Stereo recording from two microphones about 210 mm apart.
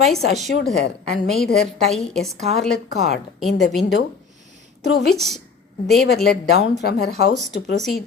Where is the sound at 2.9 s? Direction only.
50° left (ahead or behind).